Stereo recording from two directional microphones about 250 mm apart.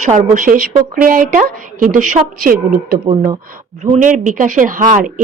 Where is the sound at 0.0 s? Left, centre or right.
Right.